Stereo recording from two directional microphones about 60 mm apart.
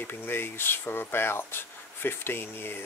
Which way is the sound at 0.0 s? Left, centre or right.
Left.